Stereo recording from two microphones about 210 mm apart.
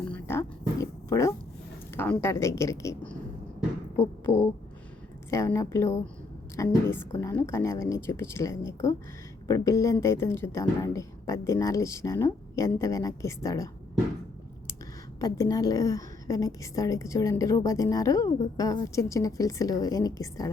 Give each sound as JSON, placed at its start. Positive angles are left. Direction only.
{"t": 0.0, "sound": "roaring cats", "side_deg": 10}
{"t": 2.0, "sound": "a woman's voice", "side_deg": 10}
{"t": 5.3, "sound": "a woman's voice", "side_deg": 15}
{"t": 15.2, "sound": "a woman's voice", "side_deg": 15}